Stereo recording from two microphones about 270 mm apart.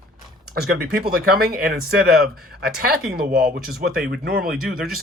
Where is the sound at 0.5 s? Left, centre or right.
Right.